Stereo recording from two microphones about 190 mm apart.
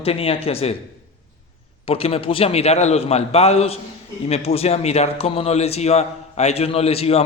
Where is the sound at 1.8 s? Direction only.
30° left (ahead or behind).